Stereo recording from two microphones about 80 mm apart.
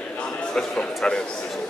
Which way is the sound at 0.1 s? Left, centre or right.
Centre.